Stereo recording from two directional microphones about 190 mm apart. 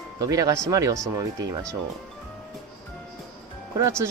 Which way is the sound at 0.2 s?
20° right (ahead or behind).